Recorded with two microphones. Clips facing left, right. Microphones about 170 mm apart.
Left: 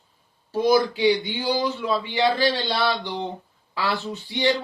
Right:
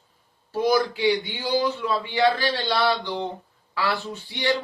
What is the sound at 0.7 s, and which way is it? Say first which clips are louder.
Speech: left 2 dB; 20° left (ahead or behind).